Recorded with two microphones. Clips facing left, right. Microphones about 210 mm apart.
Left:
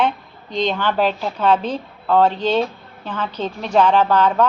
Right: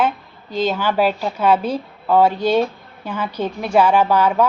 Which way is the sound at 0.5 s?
5° right (ahead or behind).